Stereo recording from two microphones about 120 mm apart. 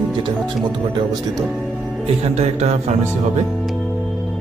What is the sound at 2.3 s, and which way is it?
Music, 70° right (ahead or behind).